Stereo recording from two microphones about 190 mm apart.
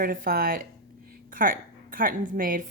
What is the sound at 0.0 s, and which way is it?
A woman's voice, 50° right (ahead or behind).